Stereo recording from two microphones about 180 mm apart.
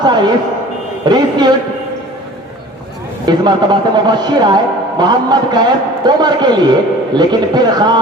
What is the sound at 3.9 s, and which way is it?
A man's voice, 25° right (ahead or behind).